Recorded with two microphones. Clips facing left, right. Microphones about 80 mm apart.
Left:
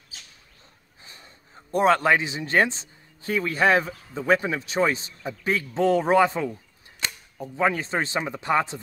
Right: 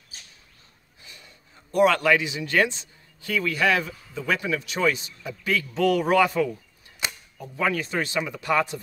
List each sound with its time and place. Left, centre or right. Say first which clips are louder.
1.0 s a man's voice: left 1 dB; left
7.0 s cap gun: right 1 dB; centre
7.3 s speech: left 2 dB; left